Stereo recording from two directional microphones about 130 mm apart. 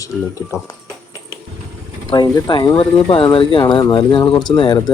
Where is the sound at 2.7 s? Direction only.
45° left (ahead or behind).